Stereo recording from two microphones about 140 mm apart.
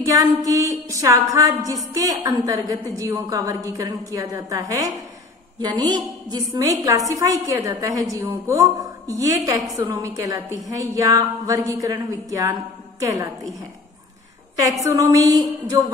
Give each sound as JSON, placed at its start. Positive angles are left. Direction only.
{"t": 0.0, "sound": "a woman's voice", "side_deg": -25}
{"t": 14.6, "sound": "a woman's voice", "side_deg": -25}